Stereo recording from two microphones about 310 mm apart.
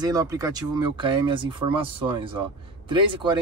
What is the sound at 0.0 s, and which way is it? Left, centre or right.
Speech, centre.